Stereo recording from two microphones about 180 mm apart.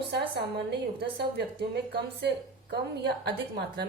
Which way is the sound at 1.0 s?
65° right (ahead or behind).